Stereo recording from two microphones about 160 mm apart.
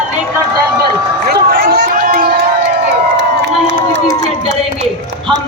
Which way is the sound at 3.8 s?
65° right (ahead or behind).